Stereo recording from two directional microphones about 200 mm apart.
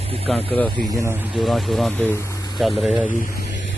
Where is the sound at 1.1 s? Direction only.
5° right (ahead or behind).